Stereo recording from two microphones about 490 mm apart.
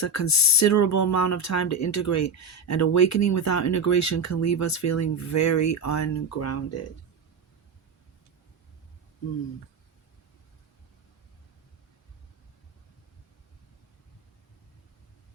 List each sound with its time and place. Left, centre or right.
0.0 s speech: left